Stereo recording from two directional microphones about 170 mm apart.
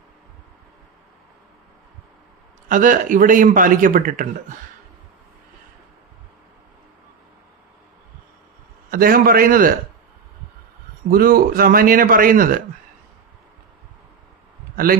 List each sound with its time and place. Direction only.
2.6 s a man's voice: 50° right (ahead or behind)
8.9 s speech: 60° right (ahead or behind)
11.1 s speech: 60° right (ahead or behind)